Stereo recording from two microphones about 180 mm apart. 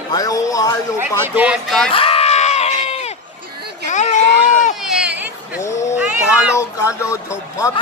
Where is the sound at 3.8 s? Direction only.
40° left (ahead or behind).